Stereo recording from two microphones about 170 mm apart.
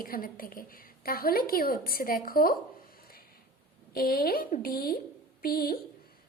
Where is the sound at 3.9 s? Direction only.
60° left (ahead or behind).